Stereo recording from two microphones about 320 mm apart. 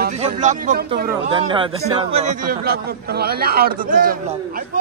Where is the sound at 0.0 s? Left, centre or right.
Right.